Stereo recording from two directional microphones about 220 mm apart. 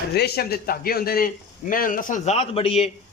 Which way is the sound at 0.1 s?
45° left (ahead or behind).